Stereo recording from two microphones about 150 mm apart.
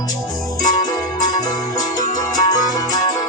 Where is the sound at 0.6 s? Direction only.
55° left (ahead or behind).